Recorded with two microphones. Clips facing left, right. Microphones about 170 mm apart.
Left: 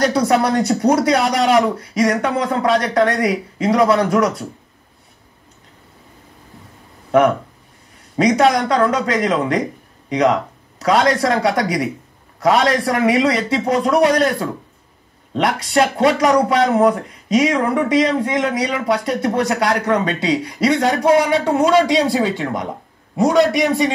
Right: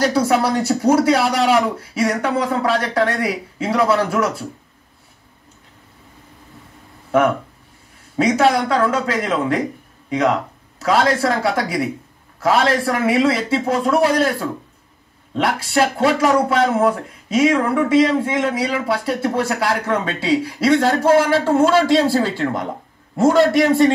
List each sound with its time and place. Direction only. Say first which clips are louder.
0.0 s a man's voice: left 1 dB; 5° right (ahead or behind)
7.1 s a man's voice: left 2 dB; 5° right (ahead or behind)
23.3 s a man's voice: left 1 dB; 20° left (ahead or behind)
23.6 s a man's voice: right 3 dB; centre (ahead or behind)